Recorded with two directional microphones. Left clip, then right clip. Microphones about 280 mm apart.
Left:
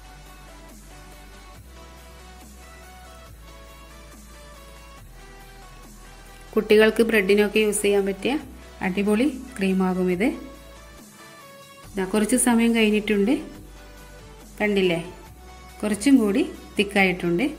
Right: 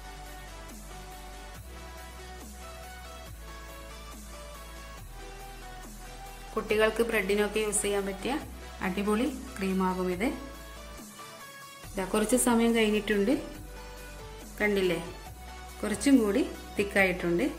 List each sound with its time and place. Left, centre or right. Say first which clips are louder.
6.5 s a woman's voice: left 9 dB; centre
11.9 s a woman's voice: left 4 dB; centre
14.6 s a woman's voice: left 5 dB; centre